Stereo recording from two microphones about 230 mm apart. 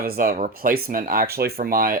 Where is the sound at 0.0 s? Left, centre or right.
Right.